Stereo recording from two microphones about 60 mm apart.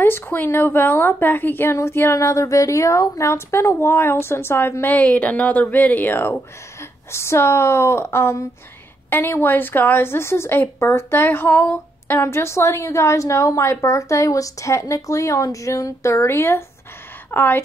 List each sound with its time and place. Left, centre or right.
0.0 s a woman's voice: left
1.8 s a woman's voice: left
4.9 s speech: left
7.1 s a woman's voice: left
17.3 s a woman's voice: left